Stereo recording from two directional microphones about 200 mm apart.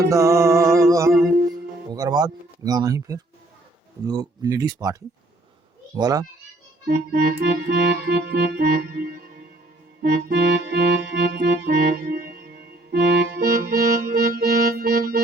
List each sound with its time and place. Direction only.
0.0 s music: 15° right (ahead or behind)
1.9 s speech: 20° right (ahead or behind)
6.8 s music: 50° right (ahead or behind)